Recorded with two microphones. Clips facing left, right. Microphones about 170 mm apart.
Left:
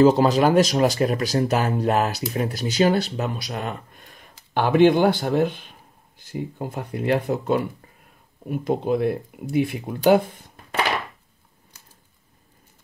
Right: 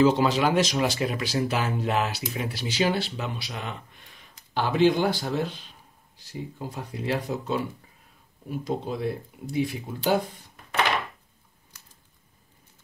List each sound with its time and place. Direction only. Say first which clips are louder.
0.0 s speech: left 5 dB; 40° left (ahead or behind); by 10.2 s 60° left (ahead or behind)